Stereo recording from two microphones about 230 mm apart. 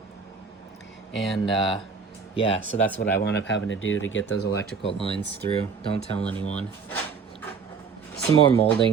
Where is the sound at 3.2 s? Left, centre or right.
Left.